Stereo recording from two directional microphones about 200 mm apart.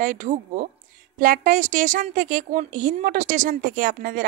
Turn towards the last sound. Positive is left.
turn(degrees=-45)  # may be behind; listen again after turning